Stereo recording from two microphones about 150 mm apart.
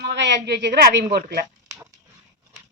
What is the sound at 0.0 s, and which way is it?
A woman's voice, 90° right.